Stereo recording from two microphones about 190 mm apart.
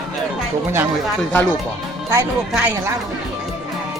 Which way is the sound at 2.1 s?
10° right (ahead or behind).